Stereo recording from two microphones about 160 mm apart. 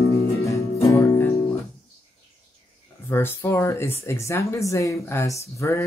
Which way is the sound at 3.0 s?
15° left (ahead or behind).